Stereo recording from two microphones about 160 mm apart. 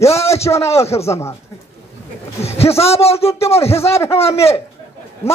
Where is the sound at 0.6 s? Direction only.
40° left (ahead or behind).